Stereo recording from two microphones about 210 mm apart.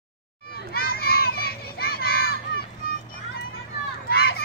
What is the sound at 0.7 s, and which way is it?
Children playing, 45° left (ahead or behind).